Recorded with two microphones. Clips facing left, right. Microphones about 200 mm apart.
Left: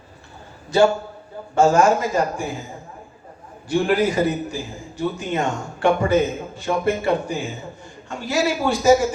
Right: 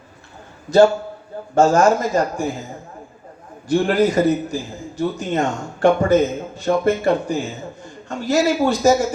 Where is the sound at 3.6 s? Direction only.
40° right (ahead or behind).